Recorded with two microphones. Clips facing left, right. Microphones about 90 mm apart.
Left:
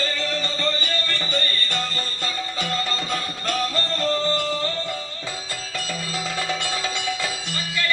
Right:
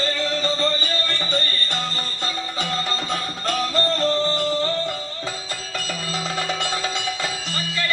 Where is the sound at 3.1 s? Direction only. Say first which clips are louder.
Right 1 dB; 25° right (ahead or behind).